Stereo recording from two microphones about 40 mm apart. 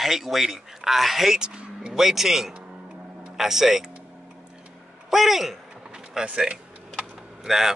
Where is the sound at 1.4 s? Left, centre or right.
Right.